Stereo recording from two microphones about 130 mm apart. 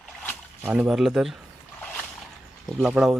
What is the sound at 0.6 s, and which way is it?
Speech, 10° right (ahead or behind).